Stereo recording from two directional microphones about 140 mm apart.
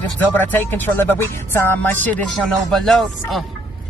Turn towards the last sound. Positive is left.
turn(degrees=0)  # may be behind; listen again after turning